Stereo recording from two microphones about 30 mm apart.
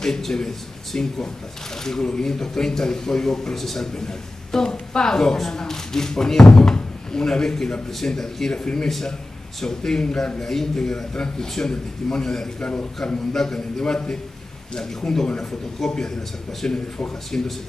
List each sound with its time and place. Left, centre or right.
0.0 s speech: centre
0.9 s a man's voice: left; by 3.8 s centre
3.8 s speech: centre
10.4 s speech: centre
12.5 s a man's voice: left
13.3 s speech: centre